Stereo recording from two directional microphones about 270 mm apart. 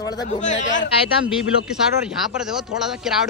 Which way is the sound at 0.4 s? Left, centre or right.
Left.